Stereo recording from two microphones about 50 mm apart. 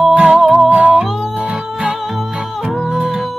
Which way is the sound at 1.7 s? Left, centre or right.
Centre.